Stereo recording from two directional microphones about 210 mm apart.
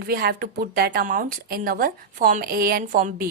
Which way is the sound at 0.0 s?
50° right (ahead or behind).